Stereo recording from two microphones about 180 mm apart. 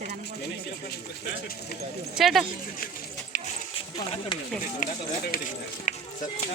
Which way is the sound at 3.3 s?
45° left (ahead or behind).